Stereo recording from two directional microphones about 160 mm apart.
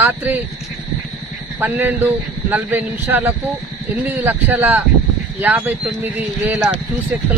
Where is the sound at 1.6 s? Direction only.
15° right (ahead or behind).